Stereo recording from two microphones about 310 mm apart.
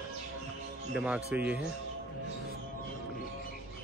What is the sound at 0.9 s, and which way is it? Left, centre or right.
Speech, centre.